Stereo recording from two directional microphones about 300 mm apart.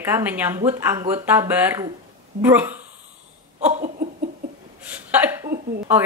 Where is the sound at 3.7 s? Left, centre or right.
Right.